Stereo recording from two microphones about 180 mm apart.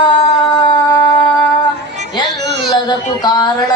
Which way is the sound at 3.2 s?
20° left (ahead or behind).